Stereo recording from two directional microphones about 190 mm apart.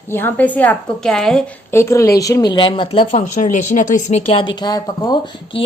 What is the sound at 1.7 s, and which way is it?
A woman's voice, 15° left (ahead or behind).